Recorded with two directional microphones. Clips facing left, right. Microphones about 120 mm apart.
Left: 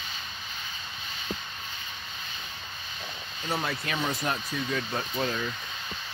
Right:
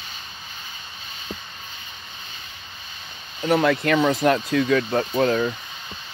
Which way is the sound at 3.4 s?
70° right (ahead or behind).